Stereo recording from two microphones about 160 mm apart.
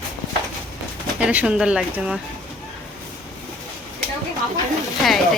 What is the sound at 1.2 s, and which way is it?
Speech, 10° right (ahead or behind).